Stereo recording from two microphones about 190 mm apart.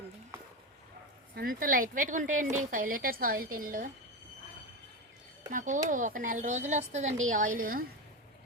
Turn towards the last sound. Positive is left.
turn(degrees=-50)  # may be behind; listen again after turning